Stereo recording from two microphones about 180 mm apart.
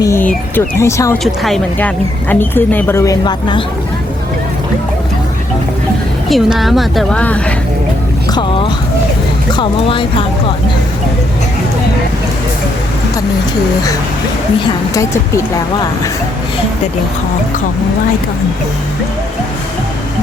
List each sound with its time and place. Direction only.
0.0 s a woman's voice: 15° left (ahead or behind)
1.2 s a woman's voice: centre (ahead or behind); by 3.6 s 20° left (ahead or behind)
6.2 s a woman's voice: centre (ahead or behind)
8.3 s a sound: 25° left (ahead or behind)
9.5 s speech: 25° left (ahead or behind)